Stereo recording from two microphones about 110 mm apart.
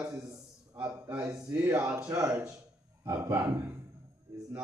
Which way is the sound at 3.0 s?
20° right (ahead or behind).